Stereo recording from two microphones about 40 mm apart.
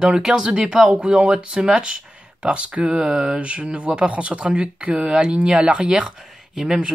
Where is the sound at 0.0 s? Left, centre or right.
Centre.